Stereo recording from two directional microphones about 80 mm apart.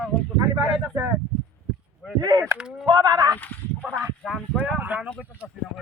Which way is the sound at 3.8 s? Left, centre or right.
Right.